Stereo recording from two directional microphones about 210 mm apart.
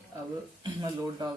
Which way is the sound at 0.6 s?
20° right (ahead or behind).